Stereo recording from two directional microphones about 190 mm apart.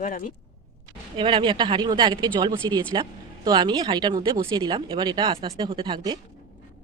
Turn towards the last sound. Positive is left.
turn(degrees=-25)  # may be behind; listen again after turning